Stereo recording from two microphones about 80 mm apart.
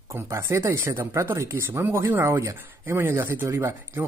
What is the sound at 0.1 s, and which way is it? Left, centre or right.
Speech, right.